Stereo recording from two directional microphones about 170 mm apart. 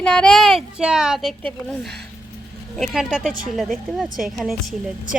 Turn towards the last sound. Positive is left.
turn(degrees=0)  # may be behind; listen again after turning